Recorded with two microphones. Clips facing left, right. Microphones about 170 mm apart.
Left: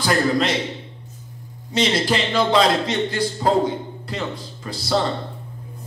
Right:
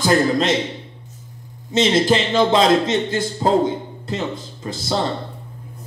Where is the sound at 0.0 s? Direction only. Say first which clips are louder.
Right 3 dB; 25° right (ahead or behind).